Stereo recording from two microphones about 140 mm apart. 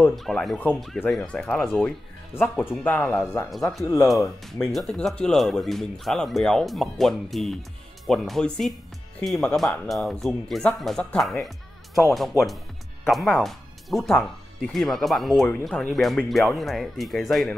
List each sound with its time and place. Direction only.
0.1 s speech: centre (ahead or behind)
2.3 s speech: 15° left (ahead or behind)
3.4 s speech: centre (ahead or behind)
12.1 s speech: centre (ahead or behind)